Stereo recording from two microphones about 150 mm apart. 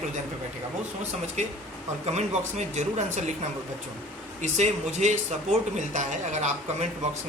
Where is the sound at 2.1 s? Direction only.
50° right (ahead or behind).